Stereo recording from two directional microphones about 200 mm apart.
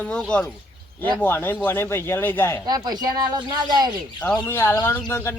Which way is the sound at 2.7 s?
20° right (ahead or behind).